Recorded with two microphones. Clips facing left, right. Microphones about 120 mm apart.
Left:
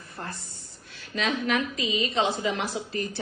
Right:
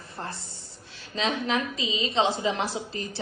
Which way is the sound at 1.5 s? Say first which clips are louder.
Left 1 dB; 20° right (ahead or behind).